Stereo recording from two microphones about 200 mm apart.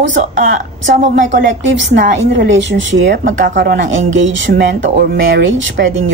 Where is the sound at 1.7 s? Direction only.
65° right (ahead or behind).